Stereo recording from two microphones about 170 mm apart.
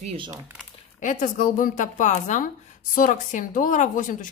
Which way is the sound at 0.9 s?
50° left (ahead or behind).